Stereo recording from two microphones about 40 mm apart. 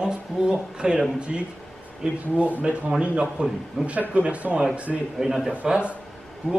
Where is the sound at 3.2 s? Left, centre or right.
Centre.